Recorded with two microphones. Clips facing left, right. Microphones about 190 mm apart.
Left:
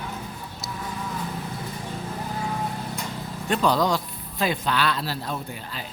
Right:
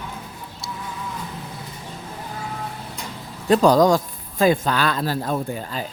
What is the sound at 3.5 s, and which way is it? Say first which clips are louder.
A man's voice: right 7 dB; 45° right (ahead or behind).